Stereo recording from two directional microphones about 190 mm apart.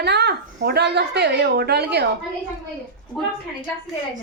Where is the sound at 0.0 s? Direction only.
60° right (ahead or behind).